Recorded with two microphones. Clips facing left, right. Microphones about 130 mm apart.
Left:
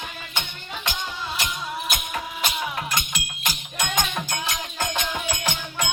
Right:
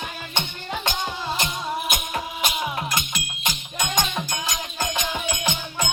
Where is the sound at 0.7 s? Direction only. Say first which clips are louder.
Right 4 dB; 35° right (ahead or behind).